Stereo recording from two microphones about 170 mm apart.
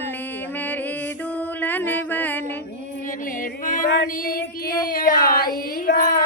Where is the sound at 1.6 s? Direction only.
10° left (ahead or behind).